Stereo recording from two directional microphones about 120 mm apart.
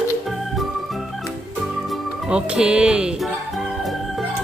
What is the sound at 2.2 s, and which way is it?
Speech, 10° right (ahead or behind).